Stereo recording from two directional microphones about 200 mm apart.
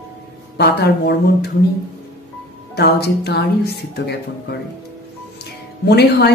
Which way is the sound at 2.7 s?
55° left (ahead or behind).